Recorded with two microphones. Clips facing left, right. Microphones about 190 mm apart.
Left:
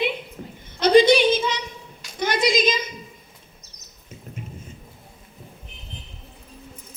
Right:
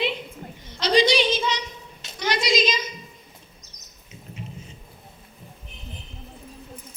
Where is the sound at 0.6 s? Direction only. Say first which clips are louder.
Left 6 dB; 50° left (ahead or behind).